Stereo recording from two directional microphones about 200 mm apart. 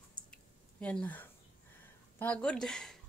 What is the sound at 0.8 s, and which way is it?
Speech, 5° left (ahead or behind).